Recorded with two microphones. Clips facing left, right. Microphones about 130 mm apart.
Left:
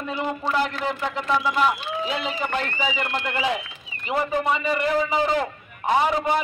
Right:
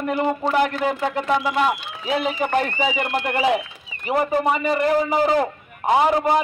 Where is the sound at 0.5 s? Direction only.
50° right (ahead or behind).